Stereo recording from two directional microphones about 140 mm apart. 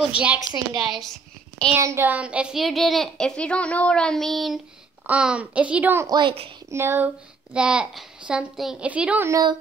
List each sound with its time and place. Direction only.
0.0 s a woman's voice: 10° right (ahead or behind)
1.7 s a woman's voice: 20° right (ahead or behind)
6.0 s a woman's voice: 35° right (ahead or behind)
6.7 s a child's voice: 15° right (ahead or behind)
9.3 s a woman's voice: 30° right (ahead or behind)